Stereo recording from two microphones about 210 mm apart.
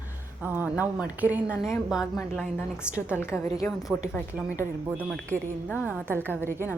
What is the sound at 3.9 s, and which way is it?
Speech, centre (ahead or behind).